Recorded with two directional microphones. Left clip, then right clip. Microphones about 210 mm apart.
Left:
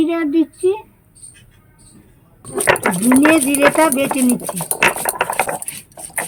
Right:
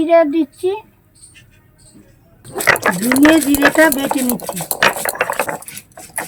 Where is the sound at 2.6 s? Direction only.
10° right (ahead or behind).